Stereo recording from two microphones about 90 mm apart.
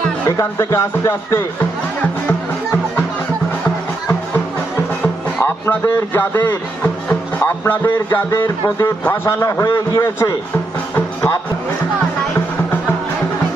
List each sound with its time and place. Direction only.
0.3 s speech: 35° left (ahead or behind)
5.4 s speech: 25° left (ahead or behind)
8.3 s speech: 40° left (ahead or behind)